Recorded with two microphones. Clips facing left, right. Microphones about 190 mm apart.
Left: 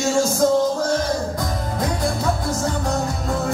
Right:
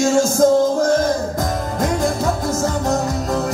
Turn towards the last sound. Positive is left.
turn(degrees=-45)  # may be behind; listen again after turning